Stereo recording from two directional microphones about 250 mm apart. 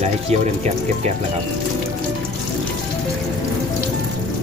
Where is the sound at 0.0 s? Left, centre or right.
Right.